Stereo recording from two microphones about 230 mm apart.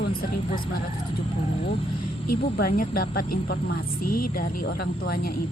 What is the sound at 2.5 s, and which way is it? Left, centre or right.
A woman's voice, left.